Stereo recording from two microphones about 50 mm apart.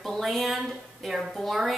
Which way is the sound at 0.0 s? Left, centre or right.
Centre.